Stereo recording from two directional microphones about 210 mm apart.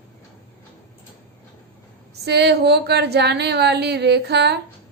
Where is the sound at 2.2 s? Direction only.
50° right (ahead or behind).